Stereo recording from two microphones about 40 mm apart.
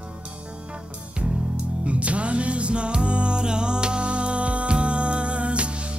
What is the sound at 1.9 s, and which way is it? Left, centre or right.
Music, right.